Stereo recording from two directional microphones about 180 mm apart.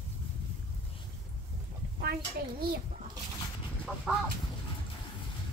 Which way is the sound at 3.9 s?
5° left (ahead or behind).